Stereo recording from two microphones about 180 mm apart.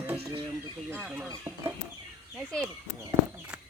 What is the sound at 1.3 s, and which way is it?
Speech, 15° right (ahead or behind).